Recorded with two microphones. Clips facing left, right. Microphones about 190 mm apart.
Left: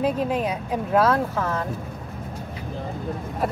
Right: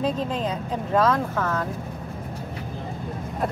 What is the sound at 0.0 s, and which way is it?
Speech, 10° left (ahead or behind).